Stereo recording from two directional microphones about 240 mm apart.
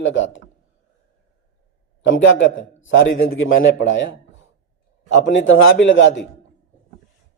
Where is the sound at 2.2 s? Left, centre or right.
Left.